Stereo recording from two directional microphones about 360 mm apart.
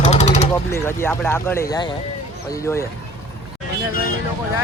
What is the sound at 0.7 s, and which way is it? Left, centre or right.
Speech, centre.